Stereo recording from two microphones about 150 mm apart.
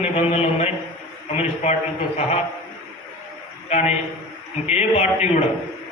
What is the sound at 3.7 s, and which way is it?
A man's voice, 45° left (ahead or behind).